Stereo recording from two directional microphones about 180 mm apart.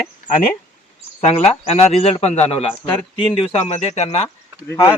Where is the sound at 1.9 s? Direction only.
35° left (ahead or behind).